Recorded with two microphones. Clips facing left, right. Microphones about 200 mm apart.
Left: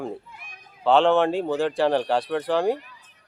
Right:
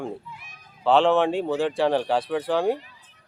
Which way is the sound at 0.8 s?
Centre (ahead or behind).